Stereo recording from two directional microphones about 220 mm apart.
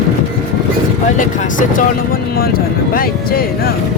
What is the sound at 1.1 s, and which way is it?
Speech, 35° left (ahead or behind).